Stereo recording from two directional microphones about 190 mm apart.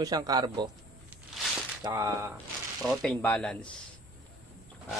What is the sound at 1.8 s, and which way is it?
Speech, 15° right (ahead or behind).